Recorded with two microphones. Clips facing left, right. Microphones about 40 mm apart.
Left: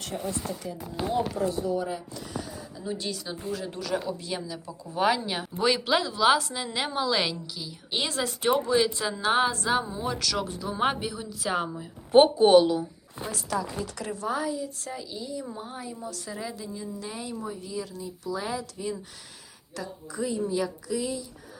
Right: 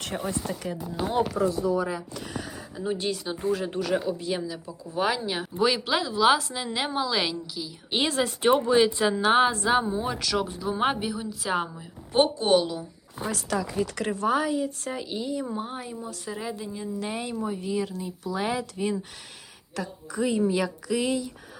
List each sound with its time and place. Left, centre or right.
0.0 s speech: right
0.6 s speech: right
2.1 s speech: right
2.8 s a woman's voice: right
3.9 s speech: centre
7.9 s a woman's voice: right; by 11.9 s centre
12.1 s a woman's voice: left
12.5 s speech: centre
13.2 s speech: right
15.5 s speech: right
16.0 s a woman's voice: centre
17.0 s a woman's voice: right
20.5 s speech: right